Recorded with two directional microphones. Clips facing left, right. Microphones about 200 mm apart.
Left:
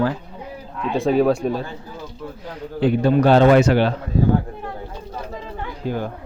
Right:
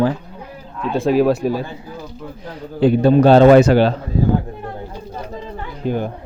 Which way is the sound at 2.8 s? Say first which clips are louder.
Right 4 dB; 35° right (ahead or behind).